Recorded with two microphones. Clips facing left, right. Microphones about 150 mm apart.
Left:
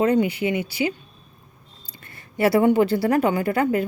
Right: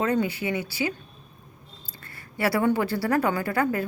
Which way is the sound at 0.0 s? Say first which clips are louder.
Left 5 dB; 20° left (ahead or behind).